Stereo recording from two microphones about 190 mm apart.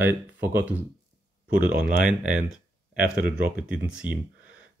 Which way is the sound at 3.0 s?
45° right (ahead or behind).